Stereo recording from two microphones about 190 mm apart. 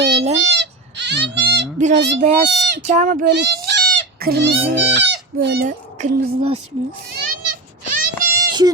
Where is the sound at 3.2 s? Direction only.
60° right (ahead or behind).